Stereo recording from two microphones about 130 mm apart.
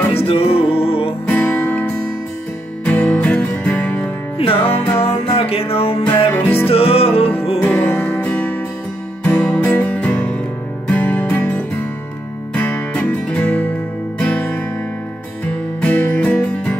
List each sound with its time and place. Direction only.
0.1 s music: 50° left (ahead or behind)
1.2 s music: 15° left (ahead or behind)
4.4 s music: 50° left (ahead or behind)
6.0 s music: 15° left (ahead or behind)
6.7 s music: 50° left (ahead or behind)
7.6 s music: 15° left (ahead or behind)
14.1 s guitar: 10° left (ahead or behind)
15.4 s music: 10° left (ahead or behind)